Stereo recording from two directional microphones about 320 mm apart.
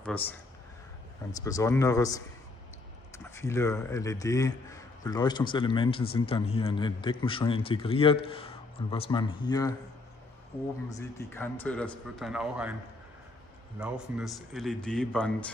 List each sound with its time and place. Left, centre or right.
0.0 s speech: centre
3.3 s speech: centre
10.9 s speech: centre
13.7 s speech: centre